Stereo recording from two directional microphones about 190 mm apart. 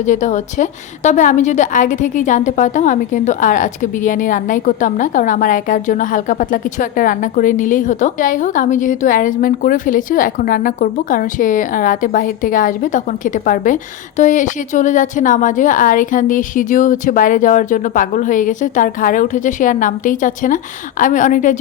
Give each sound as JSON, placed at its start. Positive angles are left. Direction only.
{"t": 0.0, "sound": "a woman's voice", "side_deg": 40}